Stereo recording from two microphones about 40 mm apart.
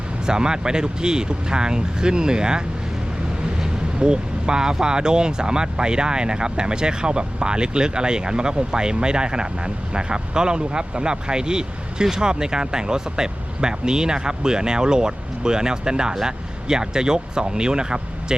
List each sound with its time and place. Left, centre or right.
0.3 s speech: centre
4.0 s speech: right